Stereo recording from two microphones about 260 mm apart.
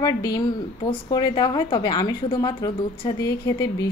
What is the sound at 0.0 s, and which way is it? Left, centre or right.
A woman's voice, centre.